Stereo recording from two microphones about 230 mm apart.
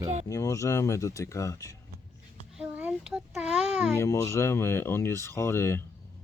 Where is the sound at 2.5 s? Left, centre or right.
Centre.